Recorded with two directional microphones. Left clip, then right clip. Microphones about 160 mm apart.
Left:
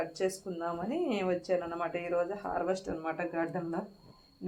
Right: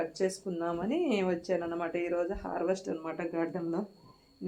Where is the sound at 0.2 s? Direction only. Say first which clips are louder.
Right 1 dB; 25° left (ahead or behind).